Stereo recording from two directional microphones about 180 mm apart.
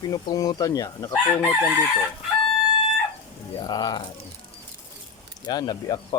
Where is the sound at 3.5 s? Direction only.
25° left (ahead or behind).